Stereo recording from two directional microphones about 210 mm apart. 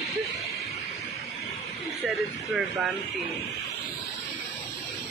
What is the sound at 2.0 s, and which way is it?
Speech, 5° right (ahead or behind).